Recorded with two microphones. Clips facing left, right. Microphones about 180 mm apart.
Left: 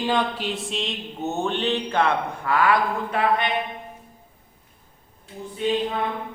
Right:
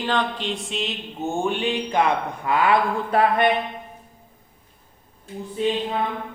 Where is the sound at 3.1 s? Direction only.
35° right (ahead or behind).